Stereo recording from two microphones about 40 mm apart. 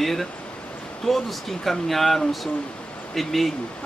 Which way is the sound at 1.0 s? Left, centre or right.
Centre.